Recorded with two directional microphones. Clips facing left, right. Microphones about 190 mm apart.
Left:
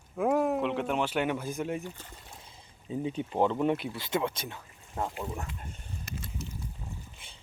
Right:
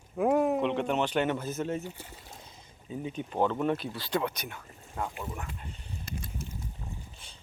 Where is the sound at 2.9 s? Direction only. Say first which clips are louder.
Left 3 dB; 25° left (ahead or behind).